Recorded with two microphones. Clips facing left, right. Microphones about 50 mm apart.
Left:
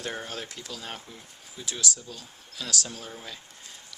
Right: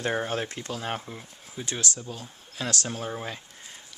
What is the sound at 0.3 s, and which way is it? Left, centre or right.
Speech, right.